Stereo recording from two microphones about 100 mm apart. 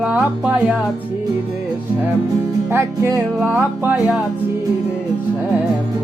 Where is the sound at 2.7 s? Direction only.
25° right (ahead or behind).